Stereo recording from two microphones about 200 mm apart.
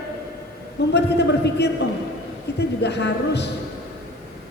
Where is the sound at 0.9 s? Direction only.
55° left (ahead or behind).